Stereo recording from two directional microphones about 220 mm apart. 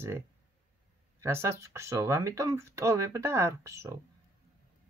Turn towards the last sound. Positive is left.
turn(degrees=-15)  # may be behind; listen again after turning